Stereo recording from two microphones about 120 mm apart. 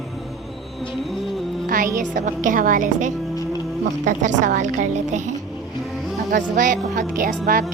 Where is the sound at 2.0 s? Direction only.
90° right.